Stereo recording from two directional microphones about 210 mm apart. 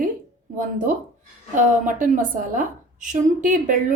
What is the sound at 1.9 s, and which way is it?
A woman's voice, 40° right (ahead or behind).